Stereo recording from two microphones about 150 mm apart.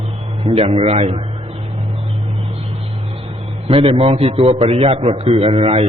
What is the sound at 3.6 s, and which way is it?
A man's voice, 40° right (ahead or behind).